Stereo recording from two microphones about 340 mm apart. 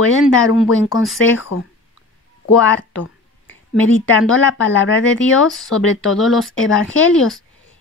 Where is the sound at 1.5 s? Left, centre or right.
Left.